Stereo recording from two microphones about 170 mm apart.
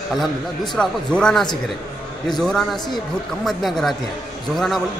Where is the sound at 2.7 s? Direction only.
25° left (ahead or behind).